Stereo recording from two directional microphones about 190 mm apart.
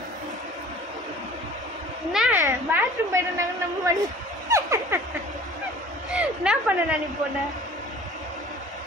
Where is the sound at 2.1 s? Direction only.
5° right (ahead or behind).